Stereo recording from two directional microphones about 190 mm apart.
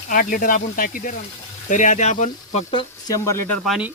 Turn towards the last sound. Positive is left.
turn(degrees=0)  # may be behind; listen again after turning